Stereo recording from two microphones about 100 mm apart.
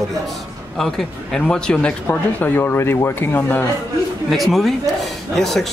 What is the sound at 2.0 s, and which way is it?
Speech, 20° left (ahead or behind).